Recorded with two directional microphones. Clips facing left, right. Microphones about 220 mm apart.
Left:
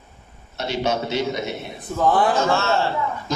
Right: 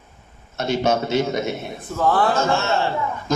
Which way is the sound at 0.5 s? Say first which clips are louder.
Right 3 dB; 50° right (ahead or behind).